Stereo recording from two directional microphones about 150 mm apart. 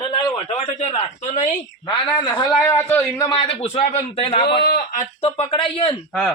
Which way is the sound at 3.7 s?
45° left (ahead or behind).